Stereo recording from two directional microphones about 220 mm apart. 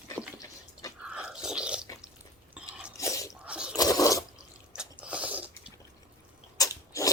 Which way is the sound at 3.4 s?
5° right (ahead or behind).